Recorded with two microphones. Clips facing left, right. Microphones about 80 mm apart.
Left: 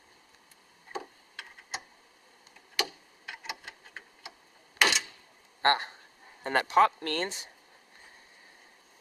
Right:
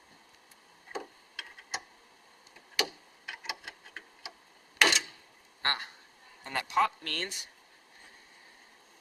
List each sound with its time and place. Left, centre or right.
0.9 s tick-tock: centre
3.2 s clock: centre
4.8 s a sound: centre
5.6 s speech: left
6.4 s speech: left